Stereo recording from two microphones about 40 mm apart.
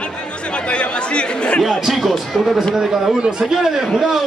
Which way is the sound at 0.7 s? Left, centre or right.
Left.